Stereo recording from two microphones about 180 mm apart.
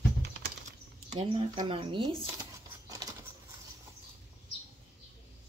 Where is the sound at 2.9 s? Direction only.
20° right (ahead or behind).